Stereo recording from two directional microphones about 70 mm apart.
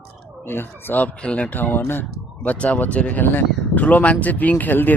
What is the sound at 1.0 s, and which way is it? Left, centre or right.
Speech, centre.